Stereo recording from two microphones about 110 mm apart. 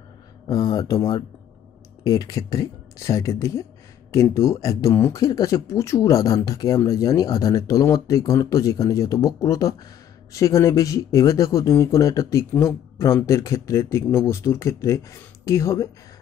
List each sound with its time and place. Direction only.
0.5 s speech: 35° left (ahead or behind)